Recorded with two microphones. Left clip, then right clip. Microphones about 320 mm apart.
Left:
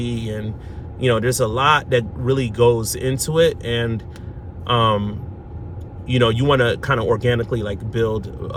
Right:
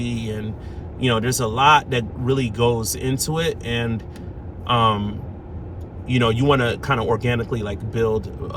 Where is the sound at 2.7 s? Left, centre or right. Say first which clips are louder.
Left 2 dB; centre.